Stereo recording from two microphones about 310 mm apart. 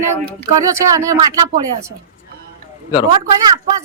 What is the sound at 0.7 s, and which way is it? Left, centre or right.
Speech, centre.